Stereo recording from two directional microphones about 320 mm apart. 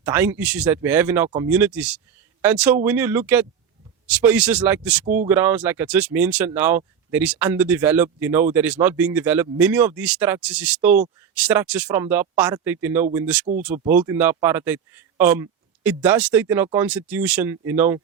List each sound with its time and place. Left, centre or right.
0.0 s speech: centre
5.0 s speech: right
5.3 s speech: centre